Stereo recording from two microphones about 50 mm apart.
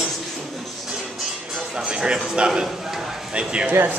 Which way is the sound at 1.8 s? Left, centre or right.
Centre.